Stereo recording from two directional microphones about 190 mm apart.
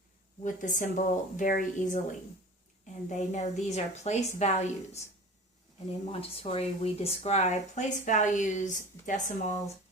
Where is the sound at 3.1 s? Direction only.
40° left (ahead or behind).